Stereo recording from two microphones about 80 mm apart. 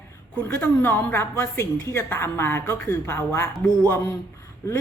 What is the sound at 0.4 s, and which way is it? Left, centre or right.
A woman's voice, left.